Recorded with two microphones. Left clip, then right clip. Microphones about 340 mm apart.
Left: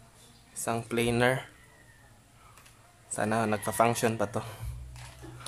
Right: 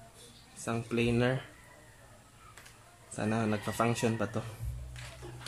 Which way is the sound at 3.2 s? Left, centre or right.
Left.